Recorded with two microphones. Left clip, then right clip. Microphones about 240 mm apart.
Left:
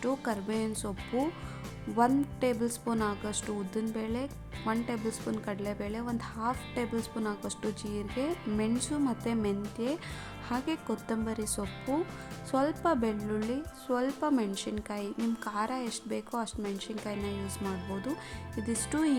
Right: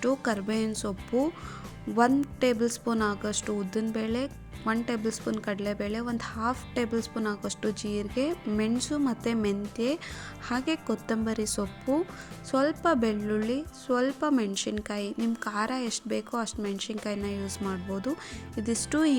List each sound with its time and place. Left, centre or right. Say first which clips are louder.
0.0 s speech: right 5 dB; centre